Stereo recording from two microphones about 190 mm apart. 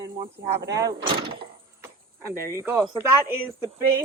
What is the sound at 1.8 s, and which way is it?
Cricket, 15° right (ahead or behind).